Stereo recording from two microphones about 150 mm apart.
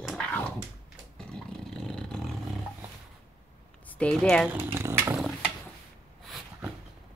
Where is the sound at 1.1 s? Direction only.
5° left (ahead or behind).